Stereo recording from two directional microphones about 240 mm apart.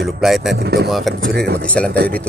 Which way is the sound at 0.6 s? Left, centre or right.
Right.